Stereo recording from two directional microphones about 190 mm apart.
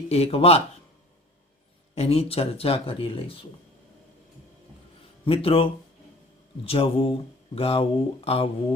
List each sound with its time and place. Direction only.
0.1 s speech: 30° left (ahead or behind)
2.0 s speech: 30° left (ahead or behind)
5.2 s speech: 30° left (ahead or behind)
6.7 s speech: 30° left (ahead or behind)